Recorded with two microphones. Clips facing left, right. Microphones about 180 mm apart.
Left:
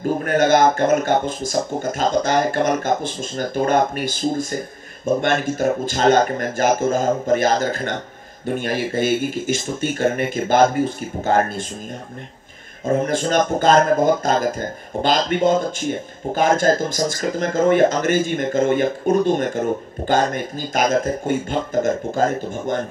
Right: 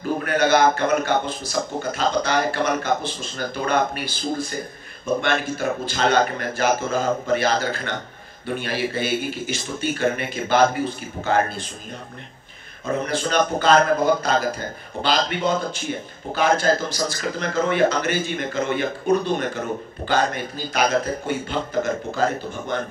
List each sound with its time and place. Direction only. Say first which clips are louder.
0.0 s a sound: left 3 dB; 45° left (ahead or behind)
0.7 s a man's voice: left 3 dB; 45° left (ahead or behind)
12.8 s a man's voice: left 5 dB; 45° left (ahead or behind)